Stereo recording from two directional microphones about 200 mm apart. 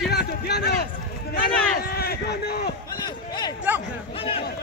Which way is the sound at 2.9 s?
20° left (ahead or behind).